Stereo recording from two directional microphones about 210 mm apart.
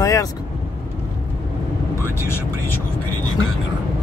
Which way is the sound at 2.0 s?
10° left (ahead or behind).